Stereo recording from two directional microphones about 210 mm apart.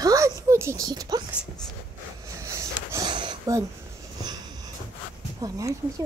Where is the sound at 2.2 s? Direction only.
15° right (ahead or behind).